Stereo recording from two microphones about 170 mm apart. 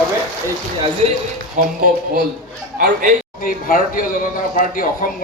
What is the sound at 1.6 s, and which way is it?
Speech, 45° right (ahead or behind).